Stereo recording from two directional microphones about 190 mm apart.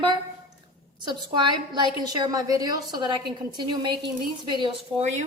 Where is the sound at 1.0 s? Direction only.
25° right (ahead or behind).